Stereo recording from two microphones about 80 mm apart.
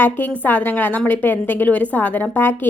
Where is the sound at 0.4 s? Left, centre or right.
Left.